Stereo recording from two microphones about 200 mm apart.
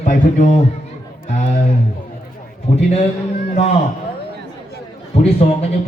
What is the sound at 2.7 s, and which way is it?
A man's voice, 30° left (ahead or behind).